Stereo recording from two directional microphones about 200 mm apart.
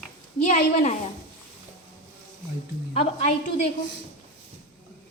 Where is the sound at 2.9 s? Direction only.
30° left (ahead or behind).